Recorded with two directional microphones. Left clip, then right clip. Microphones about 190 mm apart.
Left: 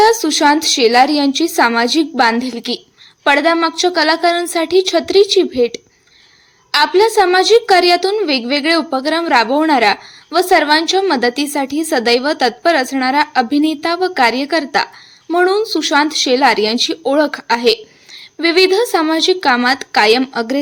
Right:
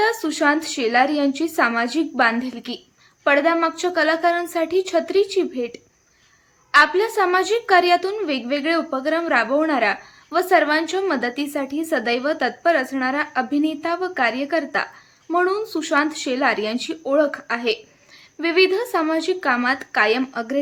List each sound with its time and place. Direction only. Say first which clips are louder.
0.0 s a woman's voice: left 8 dB; 15° left (ahead or behind)